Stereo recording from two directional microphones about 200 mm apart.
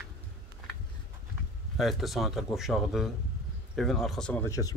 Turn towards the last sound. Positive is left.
turn(degrees=15)  # may be behind; listen again after turning